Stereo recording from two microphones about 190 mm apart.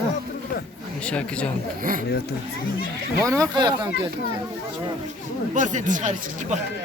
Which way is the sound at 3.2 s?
15° right (ahead or behind).